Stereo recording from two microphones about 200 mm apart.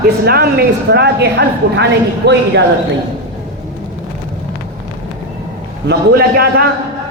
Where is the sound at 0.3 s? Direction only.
50° right (ahead or behind).